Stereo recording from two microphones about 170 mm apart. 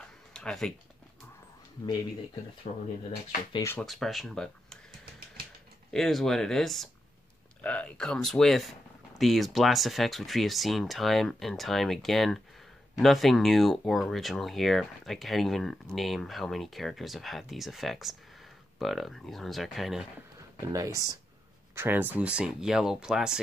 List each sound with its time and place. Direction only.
0.3 s speech: 5° left (ahead or behind)
2.7 s speech: 45° left (ahead or behind)
3.5 s speech: 15° left (ahead or behind)
3.8 s speech: centre (ahead or behind)
5.9 s speech: centre (ahead or behind)
20.6 s speech: 20° right (ahead or behind); by 23.4 s 5° right (ahead or behind)